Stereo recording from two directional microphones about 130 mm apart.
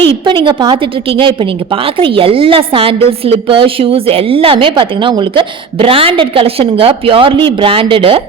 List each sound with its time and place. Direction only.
0.0 s a woman's voice: 40° right (ahead or behind)